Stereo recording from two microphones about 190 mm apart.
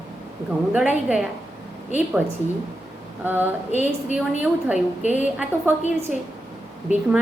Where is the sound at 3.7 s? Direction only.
40° left (ahead or behind).